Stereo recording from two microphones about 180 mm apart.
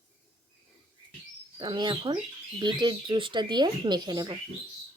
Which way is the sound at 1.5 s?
25° right (ahead or behind).